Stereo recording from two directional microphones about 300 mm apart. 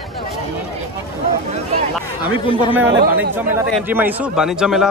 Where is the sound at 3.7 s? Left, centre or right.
Centre.